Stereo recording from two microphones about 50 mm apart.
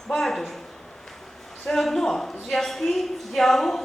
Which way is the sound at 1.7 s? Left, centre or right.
Centre.